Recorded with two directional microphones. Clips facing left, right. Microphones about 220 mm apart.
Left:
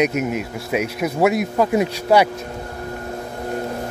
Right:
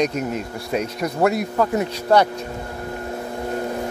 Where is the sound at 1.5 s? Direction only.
15° left (ahead or behind).